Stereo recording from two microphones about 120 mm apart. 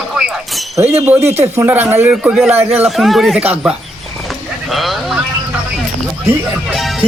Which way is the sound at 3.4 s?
15° right (ahead or behind).